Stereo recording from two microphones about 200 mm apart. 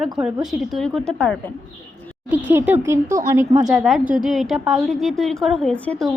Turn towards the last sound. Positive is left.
turn(degrees=5)  # may be behind; listen again after turning